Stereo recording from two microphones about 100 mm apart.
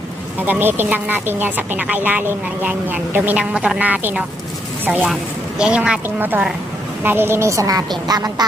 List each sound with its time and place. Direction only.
0.3 s a woman's voice: 20° right (ahead or behind)
5.5 s a woman's voice: 10° right (ahead or behind); by 8.4 s 40° right (ahead or behind)